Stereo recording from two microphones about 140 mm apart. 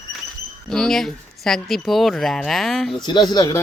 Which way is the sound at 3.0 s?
30° left (ahead or behind).